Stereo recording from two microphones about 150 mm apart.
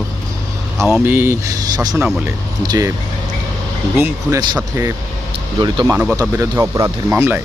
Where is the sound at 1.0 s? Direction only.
15° right (ahead or behind).